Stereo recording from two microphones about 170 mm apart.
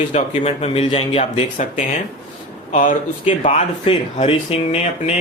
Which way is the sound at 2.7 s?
50° left (ahead or behind).